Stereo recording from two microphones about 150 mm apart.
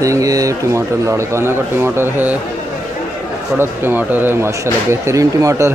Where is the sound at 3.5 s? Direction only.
15° right (ahead or behind).